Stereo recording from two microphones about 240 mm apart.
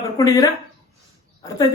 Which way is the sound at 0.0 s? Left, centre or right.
Centre.